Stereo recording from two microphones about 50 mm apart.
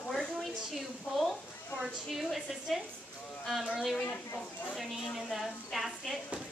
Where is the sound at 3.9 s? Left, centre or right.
Left.